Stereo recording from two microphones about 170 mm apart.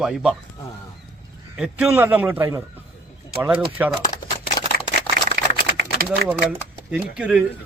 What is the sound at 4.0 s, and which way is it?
Typewriter, 50° left (ahead or behind).